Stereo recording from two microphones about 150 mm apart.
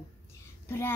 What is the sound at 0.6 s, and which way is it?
Speech, 15° left (ahead or behind).